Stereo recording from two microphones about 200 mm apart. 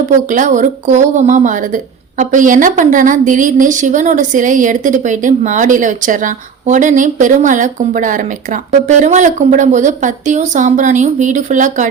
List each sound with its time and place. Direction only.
0.1 s a woman's voice: 40° right (ahead or behind)